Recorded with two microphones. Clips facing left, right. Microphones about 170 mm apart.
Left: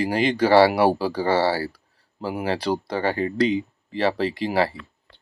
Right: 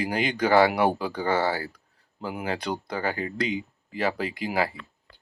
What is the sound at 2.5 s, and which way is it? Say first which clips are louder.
Speech: left 6 dB; 30° left (ahead or behind).